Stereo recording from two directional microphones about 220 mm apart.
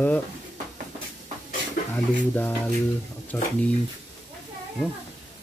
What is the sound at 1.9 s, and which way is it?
Speech, 10° left (ahead or behind).